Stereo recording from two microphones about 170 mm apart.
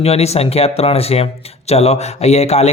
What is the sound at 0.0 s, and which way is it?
Speech, 35° left (ahead or behind).